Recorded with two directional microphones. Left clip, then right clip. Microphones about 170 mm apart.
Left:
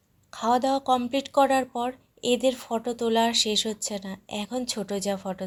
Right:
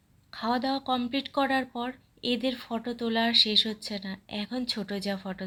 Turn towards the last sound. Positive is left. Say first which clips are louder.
# left 5 dB
turn(degrees=15)  # may be behind; listen again after turning